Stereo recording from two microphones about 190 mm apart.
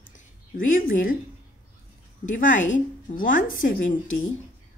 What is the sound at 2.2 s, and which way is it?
A woman's voice, 45° left (ahead or behind).